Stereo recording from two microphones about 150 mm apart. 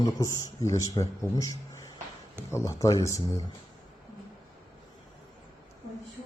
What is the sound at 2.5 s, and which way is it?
Speech, 20° left (ahead or behind).